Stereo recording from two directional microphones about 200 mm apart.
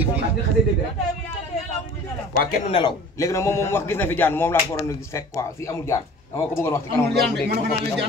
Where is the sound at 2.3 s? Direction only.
45° left (ahead or behind).